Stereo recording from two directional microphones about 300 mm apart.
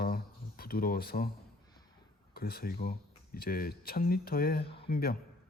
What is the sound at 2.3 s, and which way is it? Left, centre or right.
Speech, left.